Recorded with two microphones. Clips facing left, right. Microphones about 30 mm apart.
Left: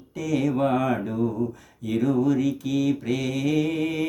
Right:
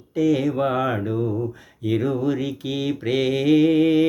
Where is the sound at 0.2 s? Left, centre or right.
Right.